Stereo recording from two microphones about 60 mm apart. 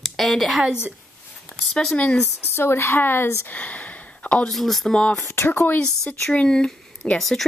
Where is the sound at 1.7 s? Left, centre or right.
Centre.